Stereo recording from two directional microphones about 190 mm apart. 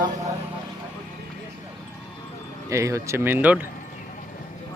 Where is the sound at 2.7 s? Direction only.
15° right (ahead or behind).